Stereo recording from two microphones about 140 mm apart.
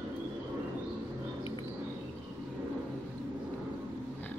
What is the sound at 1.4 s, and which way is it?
Bird, 40° left (ahead or behind).